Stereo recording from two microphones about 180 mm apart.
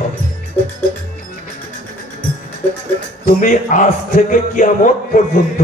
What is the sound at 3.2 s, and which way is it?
A man's voice, 45° left (ahead or behind).